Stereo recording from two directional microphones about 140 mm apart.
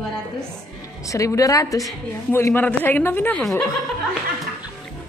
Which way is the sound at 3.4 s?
Centre (ahead or behind).